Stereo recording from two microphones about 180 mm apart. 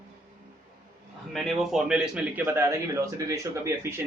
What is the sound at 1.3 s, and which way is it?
A man's voice, centre (ahead or behind).